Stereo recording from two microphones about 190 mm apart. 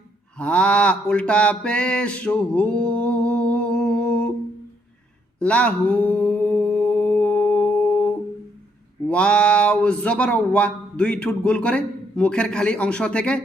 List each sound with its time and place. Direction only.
0.3 s mantra: 5° left (ahead or behind)
5.4 s mantra: 5° left (ahead or behind)
9.0 s speech: 5° left (ahead or behind)